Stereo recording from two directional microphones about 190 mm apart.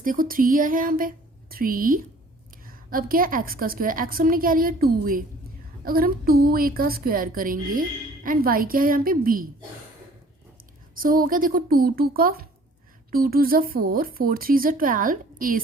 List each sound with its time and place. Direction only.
0.0 s a woman's voice: 45° right (ahead or behind)
10.9 s a woman's voice: 50° right (ahead or behind)